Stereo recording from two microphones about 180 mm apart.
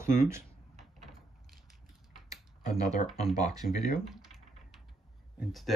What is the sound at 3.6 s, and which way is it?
Speech, 55° left (ahead or behind).